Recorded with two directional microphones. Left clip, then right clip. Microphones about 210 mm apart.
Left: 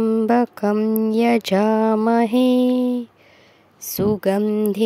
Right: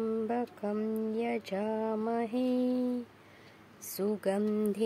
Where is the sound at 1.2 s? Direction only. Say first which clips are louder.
Left 16 dB; 50° left (ahead or behind).